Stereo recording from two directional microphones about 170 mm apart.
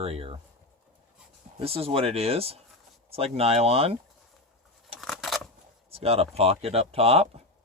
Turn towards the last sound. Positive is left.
turn(degrees=-35)  # may be behind; listen again after turning